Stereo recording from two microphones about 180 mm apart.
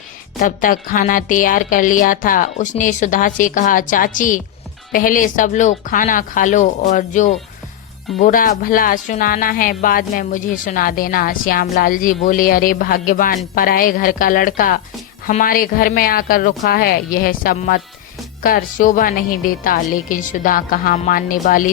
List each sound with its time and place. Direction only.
0.3 s speech: 50° left (ahead or behind)